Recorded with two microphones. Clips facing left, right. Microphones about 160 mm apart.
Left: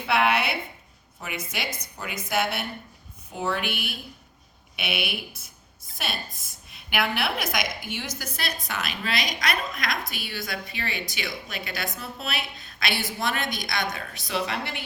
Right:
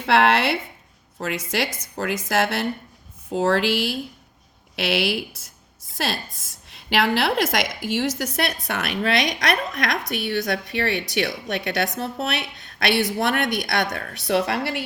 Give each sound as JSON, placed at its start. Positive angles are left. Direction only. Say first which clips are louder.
{"t": 0.0, "sound": "a woman's voice", "louder": "right 5 dB", "side_deg": -85}